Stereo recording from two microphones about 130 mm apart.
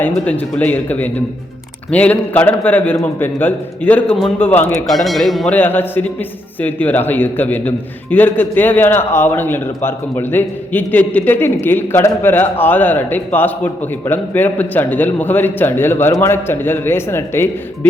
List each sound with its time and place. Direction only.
0.3 s a man's voice: 10° left (ahead or behind)
4.9 s speech: centre (ahead or behind)
5.5 s a man's voice: 15° left (ahead or behind)